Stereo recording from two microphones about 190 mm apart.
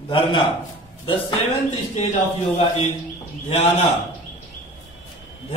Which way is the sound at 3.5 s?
35° left (ahead or behind).